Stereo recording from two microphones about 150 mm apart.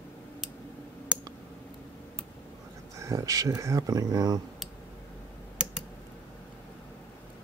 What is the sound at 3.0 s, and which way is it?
Speech, 20° right (ahead or behind).